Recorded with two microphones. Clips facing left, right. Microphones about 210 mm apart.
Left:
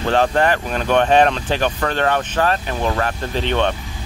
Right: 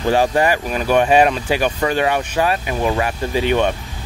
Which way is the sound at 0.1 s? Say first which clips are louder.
Right 1 dB; 10° right (ahead or behind).